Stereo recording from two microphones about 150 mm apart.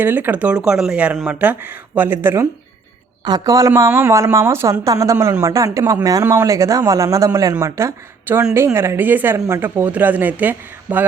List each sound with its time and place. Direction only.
0.0 s speech: 10° right (ahead or behind)